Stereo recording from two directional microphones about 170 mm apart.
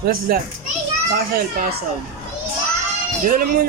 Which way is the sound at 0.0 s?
60° right (ahead or behind).